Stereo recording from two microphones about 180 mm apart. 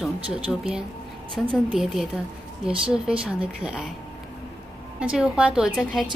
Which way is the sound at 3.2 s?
5° right (ahead or behind).